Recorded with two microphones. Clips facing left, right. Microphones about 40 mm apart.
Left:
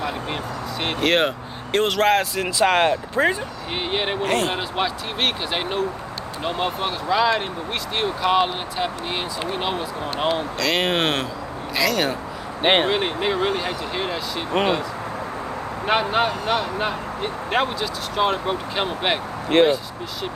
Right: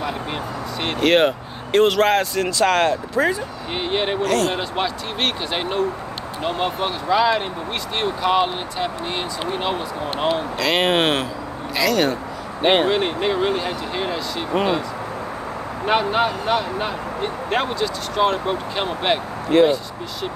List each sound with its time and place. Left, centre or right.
0.0 s speech: centre; by 3.3 s left
3.7 s speech: centre
4.2 s speech: left
4.6 s speech: centre
12.6 s speech: left
12.9 s speech: centre
15.8 s speech: centre
19.5 s speech: left